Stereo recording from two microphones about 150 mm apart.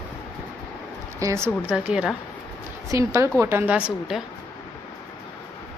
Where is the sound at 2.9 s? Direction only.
20° right (ahead or behind); by 4.2 s 5° right (ahead or behind).